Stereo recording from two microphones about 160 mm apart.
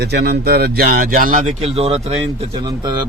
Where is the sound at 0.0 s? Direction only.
90° right; by 2.1 s 40° right (ahead or behind).